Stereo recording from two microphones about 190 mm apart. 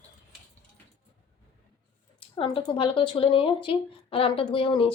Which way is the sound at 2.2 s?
30° left (ahead or behind).